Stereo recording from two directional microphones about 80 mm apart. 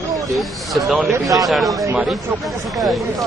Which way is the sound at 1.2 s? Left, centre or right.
Right.